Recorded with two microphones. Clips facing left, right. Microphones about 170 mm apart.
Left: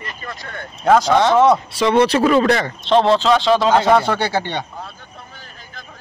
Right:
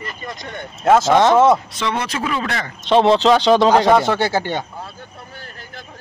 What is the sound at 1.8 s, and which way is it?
Speech, 30° left (ahead or behind).